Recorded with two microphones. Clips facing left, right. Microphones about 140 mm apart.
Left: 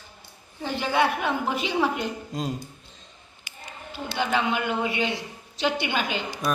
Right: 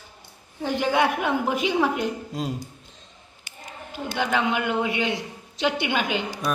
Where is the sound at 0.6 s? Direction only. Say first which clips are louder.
Right 2 dB; 10° right (ahead or behind).